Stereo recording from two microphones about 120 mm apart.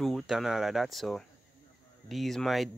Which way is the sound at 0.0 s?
Centre (ahead or behind).